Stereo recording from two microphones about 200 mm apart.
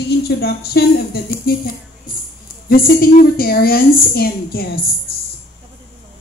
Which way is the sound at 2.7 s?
45° left (ahead or behind).